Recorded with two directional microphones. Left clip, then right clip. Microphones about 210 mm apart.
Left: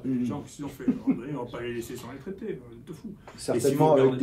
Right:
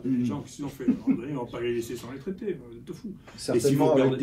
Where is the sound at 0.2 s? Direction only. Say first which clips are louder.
Right 1 dB; 10° left (ahead or behind).